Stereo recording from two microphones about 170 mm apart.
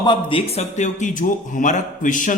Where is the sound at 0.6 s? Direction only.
45° left (ahead or behind).